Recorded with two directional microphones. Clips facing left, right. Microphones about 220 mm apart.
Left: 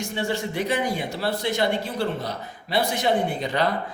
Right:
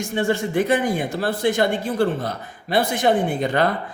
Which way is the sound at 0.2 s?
50° right (ahead or behind).